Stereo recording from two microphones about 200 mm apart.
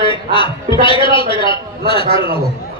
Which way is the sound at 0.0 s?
25° left (ahead or behind).